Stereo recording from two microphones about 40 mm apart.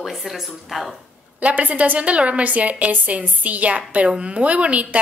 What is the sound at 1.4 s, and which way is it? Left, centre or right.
A woman's voice, right.